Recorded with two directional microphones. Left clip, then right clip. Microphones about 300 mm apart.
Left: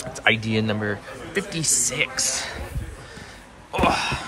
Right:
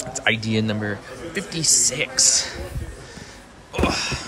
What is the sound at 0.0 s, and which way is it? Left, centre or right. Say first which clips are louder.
Speech: left 1 dB; centre.